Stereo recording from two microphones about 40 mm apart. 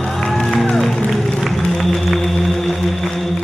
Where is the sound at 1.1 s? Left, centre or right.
Centre.